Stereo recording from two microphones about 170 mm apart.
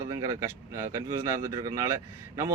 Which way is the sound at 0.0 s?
20° right (ahead or behind).